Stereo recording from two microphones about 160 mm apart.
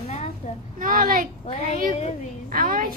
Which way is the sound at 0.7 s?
60° right (ahead or behind).